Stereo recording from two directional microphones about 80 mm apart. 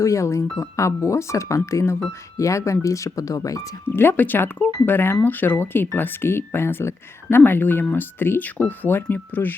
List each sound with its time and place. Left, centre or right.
0.0 s speech: left
3.8 s speech: left